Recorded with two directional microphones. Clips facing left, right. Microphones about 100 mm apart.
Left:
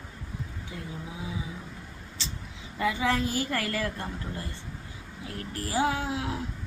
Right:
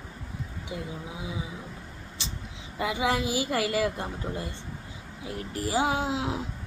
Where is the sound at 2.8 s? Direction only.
20° right (ahead or behind).